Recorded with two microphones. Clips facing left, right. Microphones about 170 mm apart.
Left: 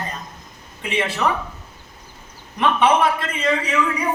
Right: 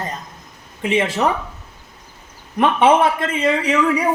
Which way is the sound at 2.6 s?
50° right (ahead or behind).